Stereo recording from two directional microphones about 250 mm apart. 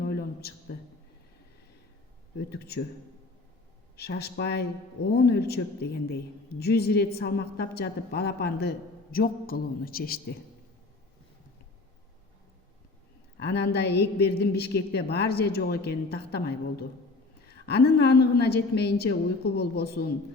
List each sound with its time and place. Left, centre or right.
0.0 s a sound: left
2.5 s speech: left
3.9 s speech: left
13.4 s speech: left